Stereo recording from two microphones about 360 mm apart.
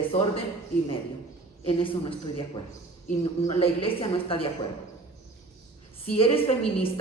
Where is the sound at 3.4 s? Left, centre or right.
Centre.